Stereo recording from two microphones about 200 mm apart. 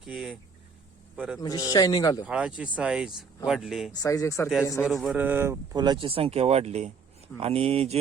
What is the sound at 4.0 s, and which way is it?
Speech, 15° left (ahead or behind).